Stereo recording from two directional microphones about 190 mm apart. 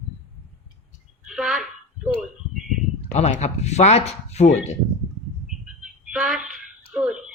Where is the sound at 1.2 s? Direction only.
Centre (ahead or behind).